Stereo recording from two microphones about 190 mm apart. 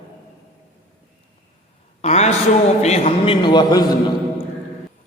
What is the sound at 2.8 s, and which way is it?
A man's voice, 35° left (ahead or behind).